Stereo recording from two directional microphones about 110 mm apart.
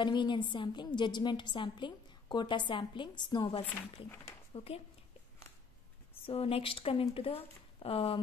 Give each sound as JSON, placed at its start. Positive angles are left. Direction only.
{"t": 0.0, "sound": "a woman's voice", "side_deg": 45}
{"t": 4.5, "sound": "speech", "side_deg": 65}
{"t": 6.2, "sound": "speech", "side_deg": 60}